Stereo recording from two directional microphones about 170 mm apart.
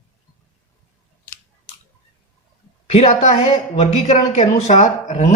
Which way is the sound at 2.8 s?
40° left (ahead or behind).